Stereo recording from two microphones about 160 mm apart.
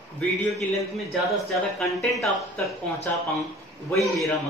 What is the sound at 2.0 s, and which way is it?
Speech, centre (ahead or behind).